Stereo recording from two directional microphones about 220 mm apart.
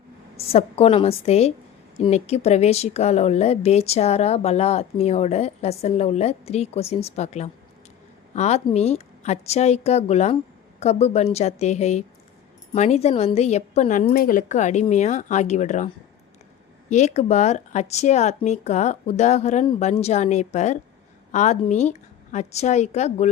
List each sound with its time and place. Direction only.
0.3 s speech: 25° left (ahead or behind)
16.9 s speech: 30° left (ahead or behind)